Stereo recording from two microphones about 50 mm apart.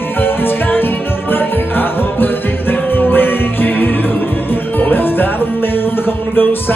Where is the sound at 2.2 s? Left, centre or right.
Left.